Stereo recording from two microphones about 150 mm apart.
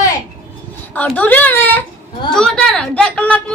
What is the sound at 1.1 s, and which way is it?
A woman's voice, 10° left (ahead or behind).